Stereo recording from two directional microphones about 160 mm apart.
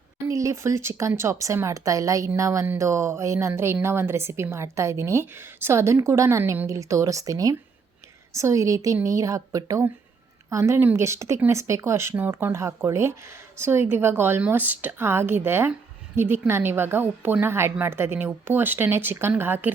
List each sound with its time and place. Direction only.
0.3 s speech: 20° right (ahead or behind)